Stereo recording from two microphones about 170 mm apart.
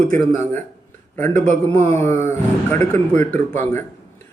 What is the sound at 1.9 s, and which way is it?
Speech, 15° left (ahead or behind).